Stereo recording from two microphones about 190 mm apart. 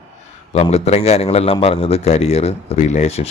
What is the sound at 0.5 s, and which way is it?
Speech, 35° left (ahead or behind).